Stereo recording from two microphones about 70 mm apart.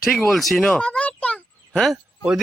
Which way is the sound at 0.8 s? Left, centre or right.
Centre.